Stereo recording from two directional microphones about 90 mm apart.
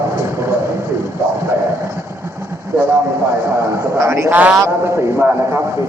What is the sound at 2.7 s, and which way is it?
A man's voice, 25° right (ahead or behind).